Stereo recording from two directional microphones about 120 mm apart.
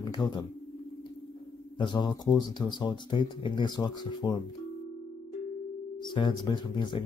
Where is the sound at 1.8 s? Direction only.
40° left (ahead or behind).